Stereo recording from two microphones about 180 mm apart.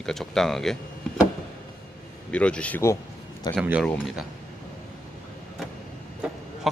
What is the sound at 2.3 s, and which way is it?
Speech, 5° left (ahead or behind).